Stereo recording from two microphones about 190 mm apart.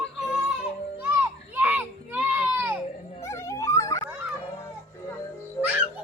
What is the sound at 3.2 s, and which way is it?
Music, 15° left (ahead or behind).